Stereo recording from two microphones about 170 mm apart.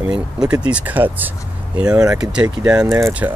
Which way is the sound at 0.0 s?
5° right (ahead or behind).